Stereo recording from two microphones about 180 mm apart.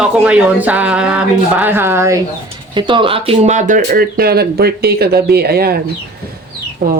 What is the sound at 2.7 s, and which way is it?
Speech, 25° right (ahead or behind).